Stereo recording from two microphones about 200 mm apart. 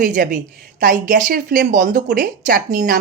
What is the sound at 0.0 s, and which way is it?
A woman's voice, 45° right (ahead or behind).